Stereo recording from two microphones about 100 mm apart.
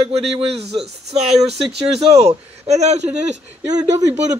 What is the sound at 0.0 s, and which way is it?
Speech, 75° right (ahead or behind).